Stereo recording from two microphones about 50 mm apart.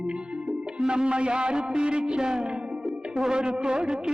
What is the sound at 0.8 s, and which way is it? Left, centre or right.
Music, centre.